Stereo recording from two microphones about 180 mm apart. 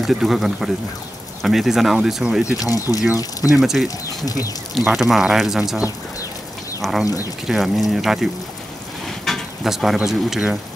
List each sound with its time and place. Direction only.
0.0 s speech: centre (ahead or behind)
2.6 s speech: 20° left (ahead or behind)
3.5 s speech: centre (ahead or behind)
4.0 s speech: 20° left (ahead or behind)
4.7 s speech: centre (ahead or behind)
6.8 s speech: centre (ahead or behind)